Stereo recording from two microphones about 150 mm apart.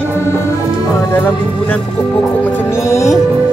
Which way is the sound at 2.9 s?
20° left (ahead or behind).